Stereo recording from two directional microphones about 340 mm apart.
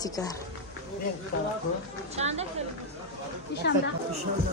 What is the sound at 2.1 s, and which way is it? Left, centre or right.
Speech, centre.